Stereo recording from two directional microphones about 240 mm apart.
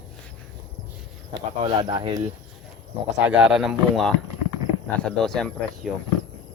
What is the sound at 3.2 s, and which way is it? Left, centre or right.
Speech, centre.